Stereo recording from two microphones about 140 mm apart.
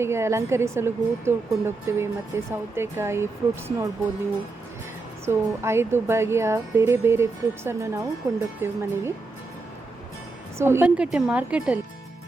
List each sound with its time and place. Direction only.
0.0 s speech: 20° right (ahead or behind)
5.2 s speech: 20° right (ahead or behind)
10.6 s a woman's voice: 15° right (ahead or behind)